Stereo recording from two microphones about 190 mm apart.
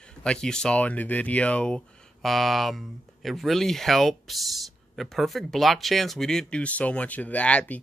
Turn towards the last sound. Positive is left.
turn(degrees=5)  # may be behind; listen again after turning